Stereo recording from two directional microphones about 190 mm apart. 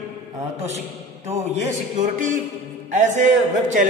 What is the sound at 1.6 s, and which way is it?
A man's voice, 40° right (ahead or behind).